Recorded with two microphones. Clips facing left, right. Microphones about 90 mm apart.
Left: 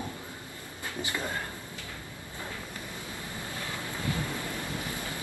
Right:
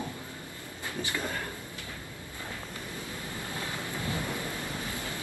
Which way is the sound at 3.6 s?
20° right (ahead or behind).